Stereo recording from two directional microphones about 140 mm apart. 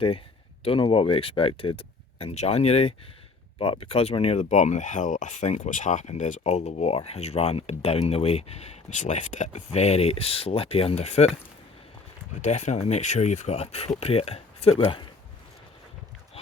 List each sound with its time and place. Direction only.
0.6 s speech: 40° left (ahead or behind)
12.4 s speech: 55° left (ahead or behind)